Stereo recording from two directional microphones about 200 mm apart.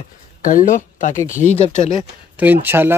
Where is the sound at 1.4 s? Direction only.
25° right (ahead or behind).